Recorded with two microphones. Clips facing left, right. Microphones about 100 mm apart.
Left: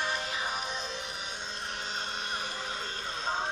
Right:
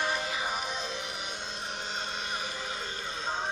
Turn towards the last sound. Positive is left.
turn(degrees=0)  # may be behind; listen again after turning